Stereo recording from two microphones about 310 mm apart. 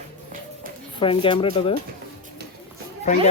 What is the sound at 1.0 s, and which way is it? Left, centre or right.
Speech, centre.